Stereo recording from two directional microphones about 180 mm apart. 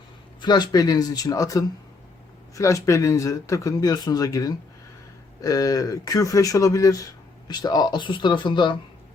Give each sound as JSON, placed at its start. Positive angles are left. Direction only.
{"t": 0.4, "sound": "speech", "side_deg": 25}